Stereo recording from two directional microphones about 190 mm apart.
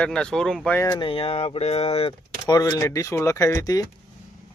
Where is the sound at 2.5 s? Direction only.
20° left (ahead or behind).